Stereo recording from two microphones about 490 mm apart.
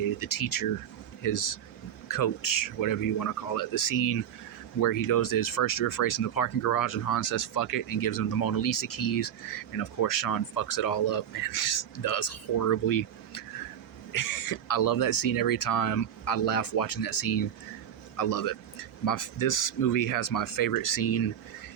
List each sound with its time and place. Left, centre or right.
0.2 s speech: left
14.1 s speech: left